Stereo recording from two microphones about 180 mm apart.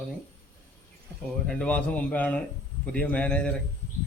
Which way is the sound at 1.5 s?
5° left (ahead or behind).